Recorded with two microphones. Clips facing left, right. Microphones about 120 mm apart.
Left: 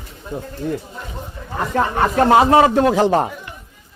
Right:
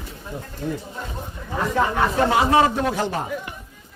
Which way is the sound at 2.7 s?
90° left.